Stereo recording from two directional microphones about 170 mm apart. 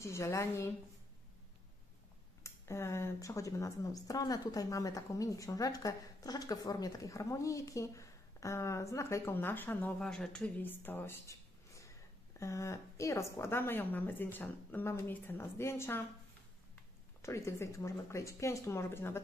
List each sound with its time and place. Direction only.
0.0 s speech: 15° left (ahead or behind)
2.4 s speech: 15° left (ahead or behind)
17.2 s speech: 15° left (ahead or behind)